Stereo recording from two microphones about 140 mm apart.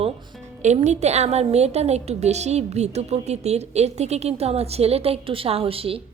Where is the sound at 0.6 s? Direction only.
55° right (ahead or behind).